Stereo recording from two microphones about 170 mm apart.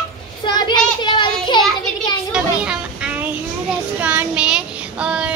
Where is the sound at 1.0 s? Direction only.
25° left (ahead or behind).